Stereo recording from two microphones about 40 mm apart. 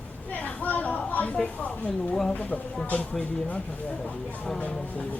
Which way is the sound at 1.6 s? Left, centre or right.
Left.